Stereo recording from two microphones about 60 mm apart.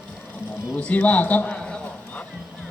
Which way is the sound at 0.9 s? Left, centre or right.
Left.